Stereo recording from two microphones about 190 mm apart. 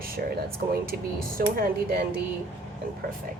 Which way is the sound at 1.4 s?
50° right (ahead or behind).